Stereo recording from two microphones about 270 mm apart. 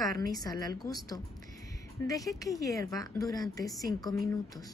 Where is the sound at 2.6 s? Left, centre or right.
Centre.